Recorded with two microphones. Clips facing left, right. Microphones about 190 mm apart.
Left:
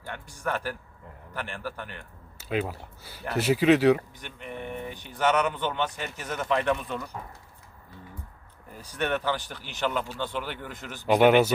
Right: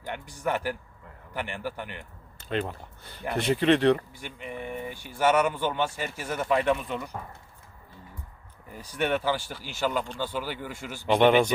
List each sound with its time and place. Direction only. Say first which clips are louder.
0.0 s speech: right 2 dB; 15° right (ahead or behind)
2.4 s speech: left 1 dB; 5° left (ahead or behind)
4.1 s speech: right 1 dB; 10° right (ahead or behind)
9.0 s speech: right 1 dB; 10° right (ahead or behind)
11.1 s speech: left 1 dB; 5° left (ahead or behind)